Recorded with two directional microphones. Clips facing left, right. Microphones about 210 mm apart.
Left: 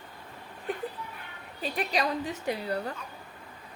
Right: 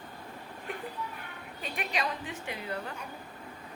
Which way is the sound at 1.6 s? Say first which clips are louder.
Left 5 dB; 35° left (ahead or behind).